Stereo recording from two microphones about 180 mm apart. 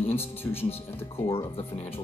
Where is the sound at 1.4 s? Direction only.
35° left (ahead or behind).